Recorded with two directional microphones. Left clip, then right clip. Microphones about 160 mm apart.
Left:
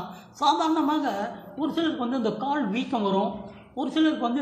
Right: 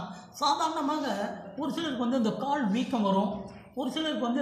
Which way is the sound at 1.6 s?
50° left (ahead or behind).